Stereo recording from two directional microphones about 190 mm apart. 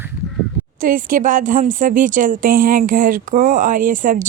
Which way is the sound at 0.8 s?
45° right (ahead or behind).